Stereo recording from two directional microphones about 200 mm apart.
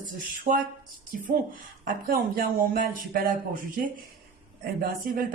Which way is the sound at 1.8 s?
45° right (ahead or behind).